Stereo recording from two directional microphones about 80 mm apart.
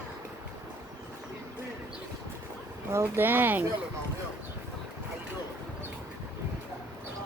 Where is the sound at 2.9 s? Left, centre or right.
Right.